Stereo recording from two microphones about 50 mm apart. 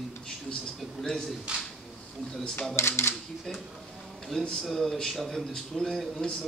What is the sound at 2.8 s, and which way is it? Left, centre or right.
Speech, left.